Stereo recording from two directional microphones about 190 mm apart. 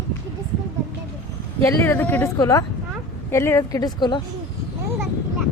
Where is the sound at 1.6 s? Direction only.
10° left (ahead or behind).